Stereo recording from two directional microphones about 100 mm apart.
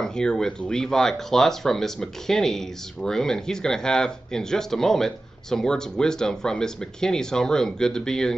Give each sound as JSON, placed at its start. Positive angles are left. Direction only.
{"t": 0.0, "sound": "speech", "side_deg": 5}